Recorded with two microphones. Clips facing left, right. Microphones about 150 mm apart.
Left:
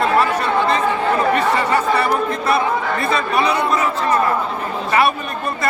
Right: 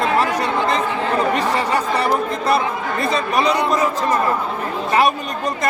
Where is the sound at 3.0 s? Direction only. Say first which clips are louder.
Right 3 dB; 40° right (ahead or behind).